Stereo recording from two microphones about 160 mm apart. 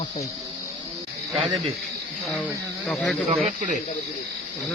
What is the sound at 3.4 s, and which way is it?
Speech, 50° right (ahead or behind).